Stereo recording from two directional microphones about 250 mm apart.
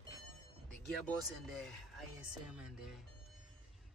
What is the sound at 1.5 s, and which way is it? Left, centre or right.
Speech, centre.